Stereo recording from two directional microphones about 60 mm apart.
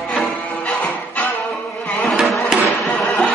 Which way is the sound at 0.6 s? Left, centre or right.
Left.